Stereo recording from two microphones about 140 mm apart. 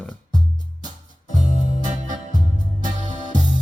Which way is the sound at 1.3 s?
65° left (ahead or behind).